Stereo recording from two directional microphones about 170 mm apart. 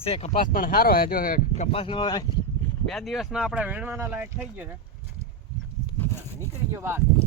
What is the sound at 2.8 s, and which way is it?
Speech, centre (ahead or behind).